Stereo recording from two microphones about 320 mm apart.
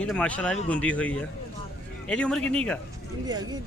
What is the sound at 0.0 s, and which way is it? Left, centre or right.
Speech, centre.